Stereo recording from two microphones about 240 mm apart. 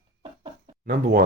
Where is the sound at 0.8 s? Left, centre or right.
Right.